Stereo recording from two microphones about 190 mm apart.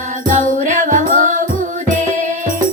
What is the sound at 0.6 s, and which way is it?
Music, 40° right (ahead or behind).